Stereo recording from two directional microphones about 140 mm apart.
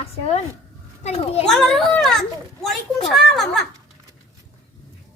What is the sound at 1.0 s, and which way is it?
Speech, 45° left (ahead or behind).